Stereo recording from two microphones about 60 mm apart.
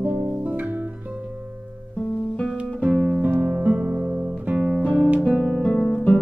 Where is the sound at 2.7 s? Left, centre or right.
Centre.